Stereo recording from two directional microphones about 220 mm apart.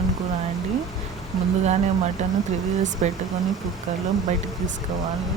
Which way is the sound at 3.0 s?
30° right (ahead or behind).